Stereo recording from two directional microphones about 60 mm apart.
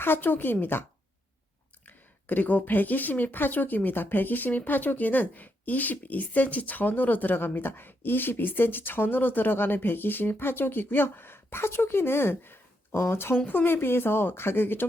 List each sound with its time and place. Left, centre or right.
0.0 s speech: left
2.2 s speech: left
13.3 s speech: left